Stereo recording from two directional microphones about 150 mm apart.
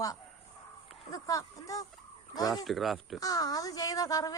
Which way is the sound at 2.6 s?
Centre (ahead or behind).